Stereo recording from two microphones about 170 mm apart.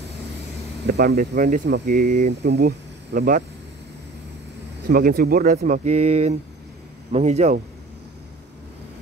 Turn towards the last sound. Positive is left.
turn(degrees=-40)  # may be behind; listen again after turning